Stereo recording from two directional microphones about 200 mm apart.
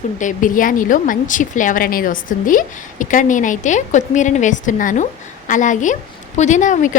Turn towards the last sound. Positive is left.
turn(degrees=40)  # may be behind; listen again after turning